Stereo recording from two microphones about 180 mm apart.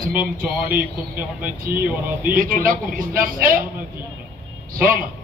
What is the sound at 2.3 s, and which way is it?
A man's voice, 50° right (ahead or behind).